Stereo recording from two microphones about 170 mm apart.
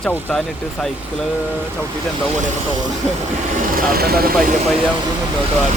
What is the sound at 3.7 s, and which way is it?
Speech, 60° right (ahead or behind).